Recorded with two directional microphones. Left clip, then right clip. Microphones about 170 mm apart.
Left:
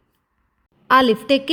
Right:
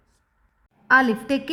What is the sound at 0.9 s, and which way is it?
Speech, 15° left (ahead or behind).